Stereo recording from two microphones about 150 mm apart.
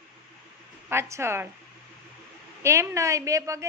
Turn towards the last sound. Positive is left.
turn(degrees=-20)  # may be behind; listen again after turning